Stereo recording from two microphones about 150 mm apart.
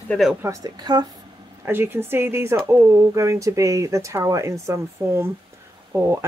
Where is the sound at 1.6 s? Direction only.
15° right (ahead or behind).